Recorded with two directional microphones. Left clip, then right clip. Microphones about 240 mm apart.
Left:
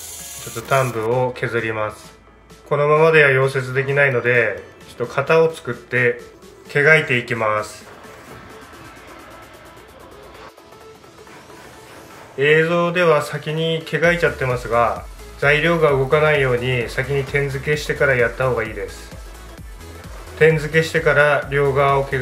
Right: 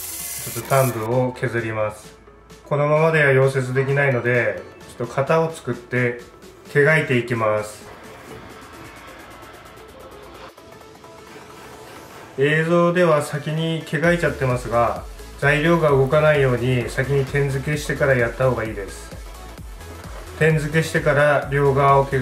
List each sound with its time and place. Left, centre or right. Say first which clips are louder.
1.3 s speech: left 3 dB; centre
12.4 s speech: left 3 dB; centre
20.3 s speech: left 5 dB; centre